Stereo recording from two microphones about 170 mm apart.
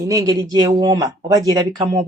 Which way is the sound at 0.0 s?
20° right (ahead or behind).